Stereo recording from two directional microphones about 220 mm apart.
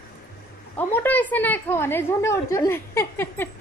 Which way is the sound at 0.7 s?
10° left (ahead or behind).